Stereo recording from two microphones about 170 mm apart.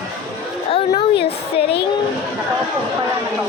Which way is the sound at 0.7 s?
30° left (ahead or behind).